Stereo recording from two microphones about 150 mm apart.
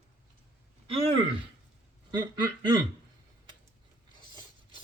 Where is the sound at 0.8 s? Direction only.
40° right (ahead or behind).